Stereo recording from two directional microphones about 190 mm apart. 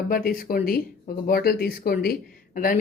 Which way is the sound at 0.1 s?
50° left (ahead or behind).